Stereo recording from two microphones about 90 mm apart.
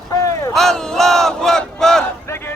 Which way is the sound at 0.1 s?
40° left (ahead or behind).